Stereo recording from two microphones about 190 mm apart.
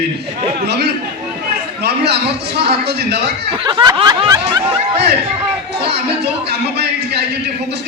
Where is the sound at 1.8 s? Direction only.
60° right (ahead or behind).